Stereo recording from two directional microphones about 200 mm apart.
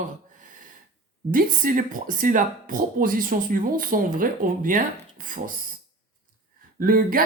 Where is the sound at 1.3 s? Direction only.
45° right (ahead or behind).